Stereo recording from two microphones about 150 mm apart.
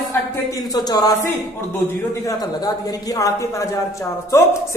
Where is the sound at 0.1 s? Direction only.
25° left (ahead or behind).